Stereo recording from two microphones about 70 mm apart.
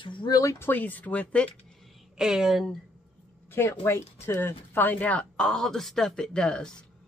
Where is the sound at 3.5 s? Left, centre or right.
Left.